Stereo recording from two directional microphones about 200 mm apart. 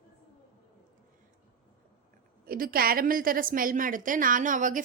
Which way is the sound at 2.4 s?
45° right (ahead or behind).